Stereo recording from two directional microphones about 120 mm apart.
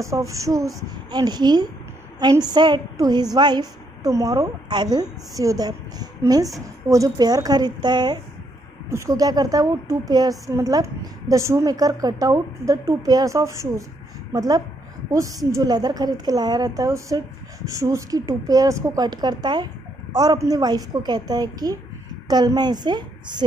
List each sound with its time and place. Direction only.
0.0 s a woman's voice: 25° right (ahead or behind)
8.8 s a woman's voice: 25° right (ahead or behind)